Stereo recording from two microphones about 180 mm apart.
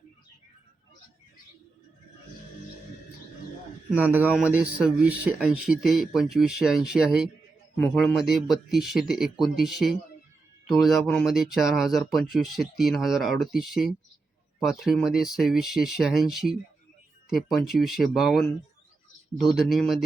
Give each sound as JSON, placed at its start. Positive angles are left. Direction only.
{"t": 3.9, "sound": "speech", "side_deg": -10}